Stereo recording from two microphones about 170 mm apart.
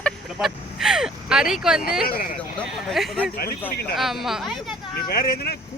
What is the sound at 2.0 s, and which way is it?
Speech, 55° left (ahead or behind).